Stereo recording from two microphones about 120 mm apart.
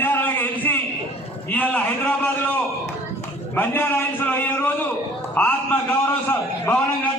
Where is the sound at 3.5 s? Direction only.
15° left (ahead or behind).